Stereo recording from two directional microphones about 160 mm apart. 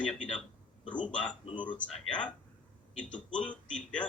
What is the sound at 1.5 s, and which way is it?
Speech, 30° left (ahead or behind).